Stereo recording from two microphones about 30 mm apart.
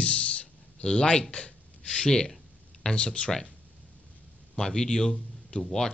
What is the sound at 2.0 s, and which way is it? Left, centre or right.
A man's voice, left.